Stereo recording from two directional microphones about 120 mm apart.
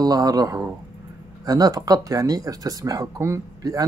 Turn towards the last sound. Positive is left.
turn(degrees=-25)  # may be behind; listen again after turning